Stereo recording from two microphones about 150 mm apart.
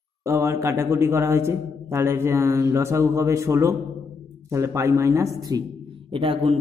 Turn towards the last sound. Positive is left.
turn(degrees=-35)  # may be behind; listen again after turning